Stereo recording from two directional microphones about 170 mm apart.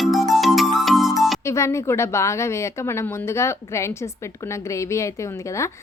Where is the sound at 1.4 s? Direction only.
15° left (ahead or behind).